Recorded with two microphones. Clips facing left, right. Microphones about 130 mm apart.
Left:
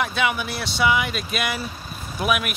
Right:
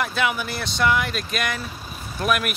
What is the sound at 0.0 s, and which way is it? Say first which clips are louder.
Speech: even; centre (ahead or behind).